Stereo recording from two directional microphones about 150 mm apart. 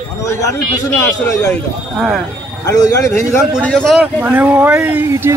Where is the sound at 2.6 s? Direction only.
20° left (ahead or behind); by 4.3 s centre (ahead or behind).